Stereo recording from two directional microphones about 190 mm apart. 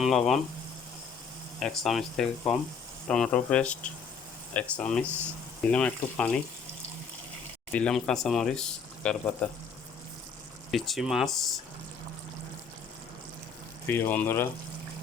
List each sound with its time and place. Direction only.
0.0 s speech: centre (ahead or behind)
1.5 s speech: centre (ahead or behind)
7.7 s speech: 5° left (ahead or behind)
10.7 s speech: centre (ahead or behind)
13.8 s speech: 10° left (ahead or behind)